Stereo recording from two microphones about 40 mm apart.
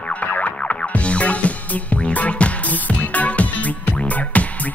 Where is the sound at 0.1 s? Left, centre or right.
Left.